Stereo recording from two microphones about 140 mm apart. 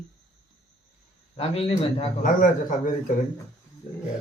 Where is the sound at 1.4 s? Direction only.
45° left (ahead or behind).